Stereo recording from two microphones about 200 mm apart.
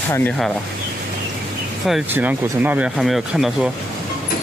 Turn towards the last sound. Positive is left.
turn(degrees=0)  # may be behind; listen again after turning